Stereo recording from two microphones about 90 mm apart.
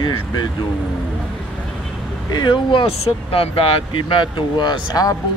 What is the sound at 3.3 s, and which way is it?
Speech, 90° left.